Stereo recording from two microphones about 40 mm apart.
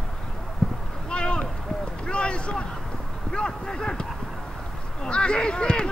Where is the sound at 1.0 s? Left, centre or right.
Left.